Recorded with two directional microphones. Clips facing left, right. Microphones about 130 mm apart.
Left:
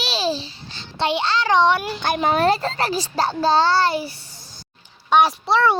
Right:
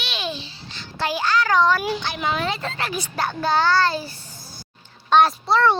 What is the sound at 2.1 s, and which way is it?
A child's voice, 40° left (ahead or behind).